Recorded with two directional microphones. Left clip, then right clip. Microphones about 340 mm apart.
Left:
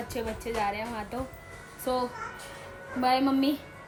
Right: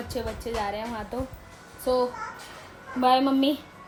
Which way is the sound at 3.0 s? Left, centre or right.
Centre.